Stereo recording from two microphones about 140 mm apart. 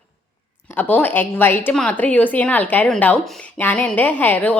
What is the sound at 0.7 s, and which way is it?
A woman's voice, 10° left (ahead or behind).